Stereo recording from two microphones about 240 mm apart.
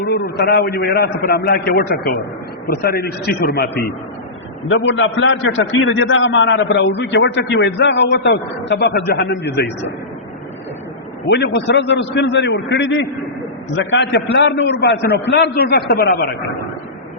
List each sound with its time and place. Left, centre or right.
0.0 s a man's voice: left
4.7 s a man's voice: left
11.3 s a man's voice: left